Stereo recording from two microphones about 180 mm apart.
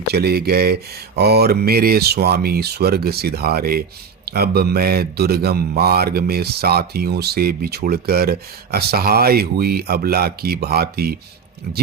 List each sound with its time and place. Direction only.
0.1 s speech: 60° right (ahead or behind)